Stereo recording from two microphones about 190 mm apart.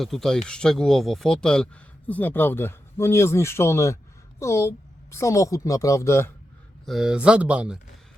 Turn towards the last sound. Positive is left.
turn(degrees=-5)  # may be behind; listen again after turning